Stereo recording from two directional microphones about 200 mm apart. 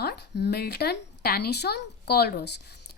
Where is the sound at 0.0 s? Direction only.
55° left (ahead or behind).